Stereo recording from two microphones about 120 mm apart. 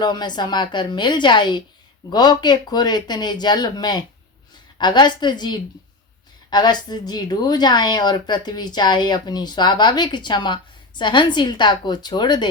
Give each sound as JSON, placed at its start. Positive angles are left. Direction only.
{"t": 0.0, "sound": "a woman's voice", "side_deg": 35}